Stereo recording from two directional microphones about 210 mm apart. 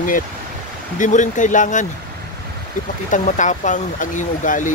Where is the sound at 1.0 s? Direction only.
35° left (ahead or behind).